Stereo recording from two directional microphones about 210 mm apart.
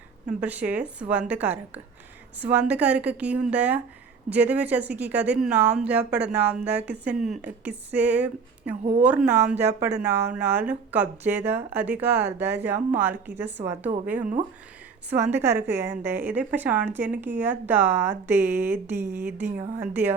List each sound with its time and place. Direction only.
0.3 s a woman's voice: 5° right (ahead or behind)
13.6 s a woman's voice: 20° right (ahead or behind)
15.1 s a woman's voice: 10° right (ahead or behind)